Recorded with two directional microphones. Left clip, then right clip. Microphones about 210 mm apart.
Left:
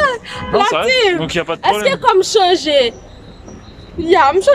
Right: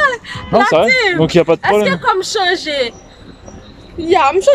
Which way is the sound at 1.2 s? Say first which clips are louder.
Right 7 dB; 20° right (ahead or behind).